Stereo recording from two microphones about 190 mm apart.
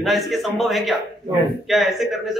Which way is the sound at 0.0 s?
Centre (ahead or behind).